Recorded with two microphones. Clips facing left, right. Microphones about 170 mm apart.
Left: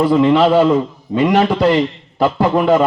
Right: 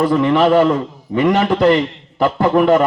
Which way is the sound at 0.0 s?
20° left (ahead or behind).